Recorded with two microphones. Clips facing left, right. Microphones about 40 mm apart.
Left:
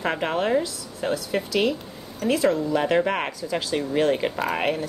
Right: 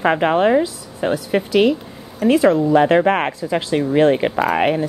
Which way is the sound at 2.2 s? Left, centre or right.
Right.